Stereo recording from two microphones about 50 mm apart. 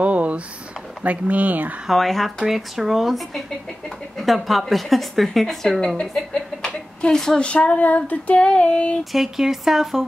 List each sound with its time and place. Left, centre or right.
0.0 s a sound: right
1.0 s speech: right
1.9 s a woman's voice: centre
7.3 s female singing: left
8.5 s female singing: centre
9.1 s speech: centre